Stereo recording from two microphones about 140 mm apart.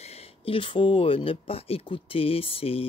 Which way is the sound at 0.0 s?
45° left (ahead or behind).